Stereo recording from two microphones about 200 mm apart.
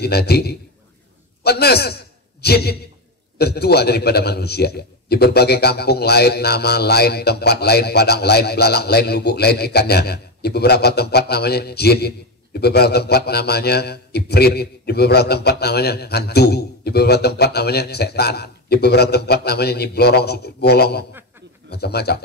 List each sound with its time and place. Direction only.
0.0 s a man's voice: 55° left (ahead or behind)